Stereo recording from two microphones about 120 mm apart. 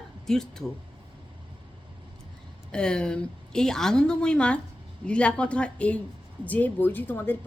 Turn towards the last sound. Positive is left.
turn(degrees=15)  # may be behind; listen again after turning